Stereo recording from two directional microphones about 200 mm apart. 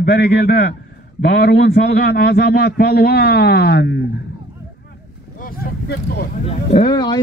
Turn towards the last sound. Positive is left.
turn(degrees=20)  # may be behind; listen again after turning